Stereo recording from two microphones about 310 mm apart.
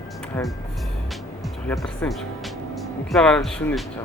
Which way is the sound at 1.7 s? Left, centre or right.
Centre.